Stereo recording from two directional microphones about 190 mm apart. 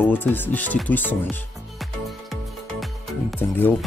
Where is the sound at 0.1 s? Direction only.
10° left (ahead or behind).